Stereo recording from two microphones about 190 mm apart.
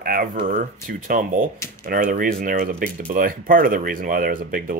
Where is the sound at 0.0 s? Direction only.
50° right (ahead or behind).